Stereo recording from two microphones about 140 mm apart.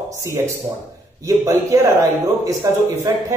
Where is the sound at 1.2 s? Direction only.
20° right (ahead or behind).